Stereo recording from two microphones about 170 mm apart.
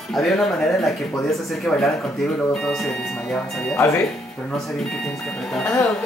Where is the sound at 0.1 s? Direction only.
Centre (ahead or behind).